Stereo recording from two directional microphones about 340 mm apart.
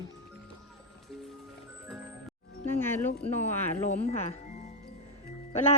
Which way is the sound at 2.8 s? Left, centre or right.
Centre.